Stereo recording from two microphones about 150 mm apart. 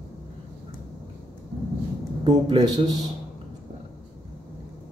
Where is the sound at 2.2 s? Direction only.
30° right (ahead or behind).